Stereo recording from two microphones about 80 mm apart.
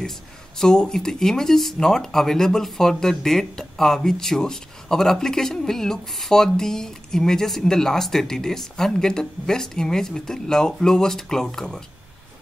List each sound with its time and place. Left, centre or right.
0.6 s speech: centre